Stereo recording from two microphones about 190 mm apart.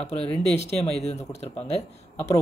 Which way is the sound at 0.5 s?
35° left (ahead or behind).